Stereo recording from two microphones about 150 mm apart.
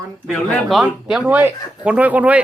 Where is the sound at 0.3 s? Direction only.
Centre (ahead or behind).